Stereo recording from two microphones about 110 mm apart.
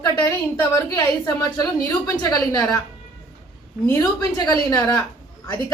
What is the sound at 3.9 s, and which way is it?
Speech, 35° left (ahead or behind).